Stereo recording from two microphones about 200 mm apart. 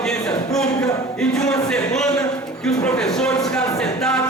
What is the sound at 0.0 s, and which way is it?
Cattle, 5° left (ahead or behind).